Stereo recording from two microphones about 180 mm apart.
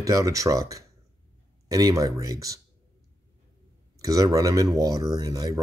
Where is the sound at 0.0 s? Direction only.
20° right (ahead or behind).